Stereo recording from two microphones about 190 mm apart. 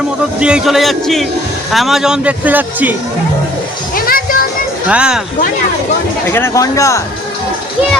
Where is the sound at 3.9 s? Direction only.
50° left (ahead or behind).